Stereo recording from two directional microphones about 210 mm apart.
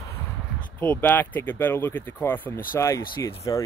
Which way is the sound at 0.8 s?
10° left (ahead or behind).